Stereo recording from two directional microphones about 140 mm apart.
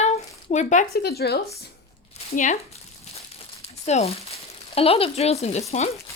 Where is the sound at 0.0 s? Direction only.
55° left (ahead or behind).